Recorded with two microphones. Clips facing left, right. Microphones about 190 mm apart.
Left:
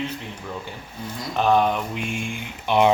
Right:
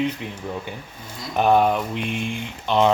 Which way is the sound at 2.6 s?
15° left (ahead or behind).